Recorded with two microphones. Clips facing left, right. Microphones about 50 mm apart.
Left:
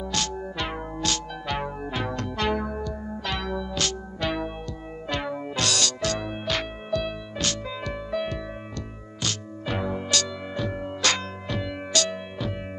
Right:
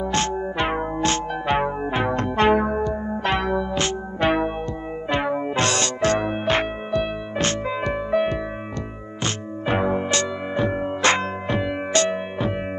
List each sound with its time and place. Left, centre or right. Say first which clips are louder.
0.0 s music: right 7 dB; right